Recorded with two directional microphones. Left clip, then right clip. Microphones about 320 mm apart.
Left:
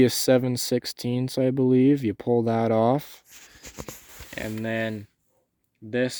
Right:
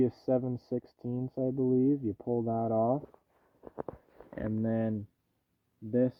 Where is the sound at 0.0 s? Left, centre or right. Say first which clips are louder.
Left 10 dB; left.